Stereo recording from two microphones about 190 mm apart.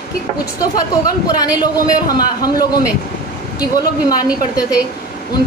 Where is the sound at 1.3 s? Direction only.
20° left (ahead or behind).